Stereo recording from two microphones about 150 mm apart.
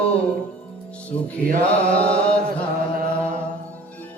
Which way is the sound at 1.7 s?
10° left (ahead or behind).